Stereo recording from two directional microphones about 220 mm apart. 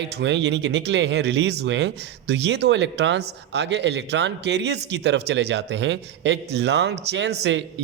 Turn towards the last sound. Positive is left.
turn(degrees=-50)  # may be behind; listen again after turning